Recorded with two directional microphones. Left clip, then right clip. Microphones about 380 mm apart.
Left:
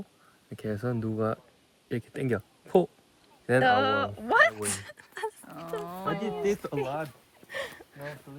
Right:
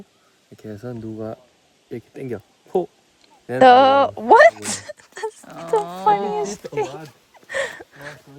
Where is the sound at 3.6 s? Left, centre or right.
Centre.